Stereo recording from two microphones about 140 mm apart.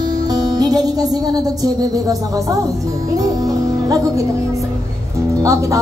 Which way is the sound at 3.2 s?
25° right (ahead or behind).